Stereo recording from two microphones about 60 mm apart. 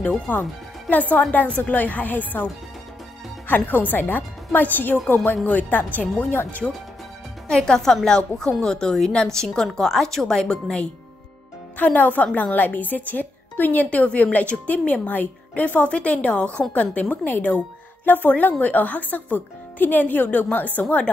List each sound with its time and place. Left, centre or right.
0.3 s a woman's voice: left
3.4 s a woman's voice: left
7.4 s speech: centre
11.7 s a woman's voice: left